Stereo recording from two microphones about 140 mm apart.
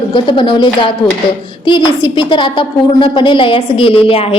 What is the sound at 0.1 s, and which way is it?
A woman's voice, 35° left (ahead or behind).